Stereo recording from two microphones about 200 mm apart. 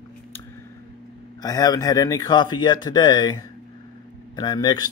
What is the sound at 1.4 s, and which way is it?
A man's voice, 20° left (ahead or behind).